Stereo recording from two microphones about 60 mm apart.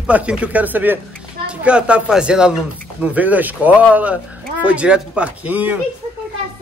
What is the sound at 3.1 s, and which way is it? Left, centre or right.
Speech, right.